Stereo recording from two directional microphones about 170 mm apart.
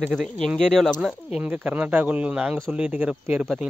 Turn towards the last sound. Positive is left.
turn(degrees=-5)  # may be behind; listen again after turning